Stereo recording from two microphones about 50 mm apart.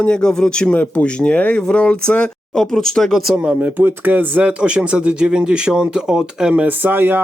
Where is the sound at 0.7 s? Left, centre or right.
Left; by 3.2 s centre.